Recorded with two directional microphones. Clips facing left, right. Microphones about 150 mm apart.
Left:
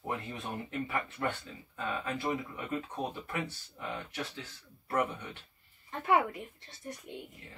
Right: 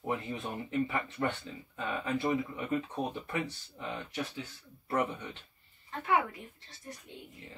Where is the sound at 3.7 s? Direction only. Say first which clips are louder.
Right 1 dB; 15° right (ahead or behind).